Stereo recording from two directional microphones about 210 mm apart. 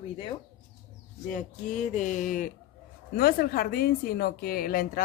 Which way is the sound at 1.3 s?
35° left (ahead or behind).